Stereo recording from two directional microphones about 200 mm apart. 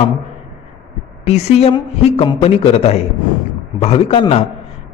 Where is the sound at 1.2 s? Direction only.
30° left (ahead or behind).